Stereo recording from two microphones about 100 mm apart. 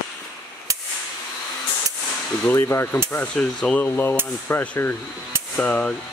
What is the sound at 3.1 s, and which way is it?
Speech, 15° left (ahead or behind).